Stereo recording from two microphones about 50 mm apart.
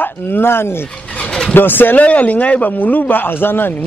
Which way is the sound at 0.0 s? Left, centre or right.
Left.